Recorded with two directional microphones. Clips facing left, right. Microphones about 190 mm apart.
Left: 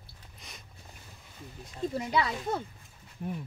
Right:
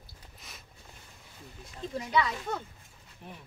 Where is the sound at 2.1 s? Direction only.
35° left (ahead or behind).